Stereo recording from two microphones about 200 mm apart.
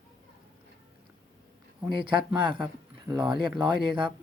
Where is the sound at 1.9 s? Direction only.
25° right (ahead or behind).